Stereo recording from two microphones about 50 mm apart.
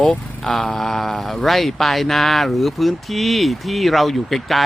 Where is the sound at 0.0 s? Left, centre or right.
Left.